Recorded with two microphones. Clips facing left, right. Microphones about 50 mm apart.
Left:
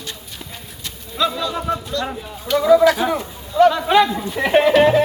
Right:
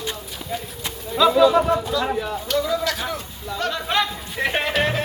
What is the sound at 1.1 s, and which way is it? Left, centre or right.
Speech, centre.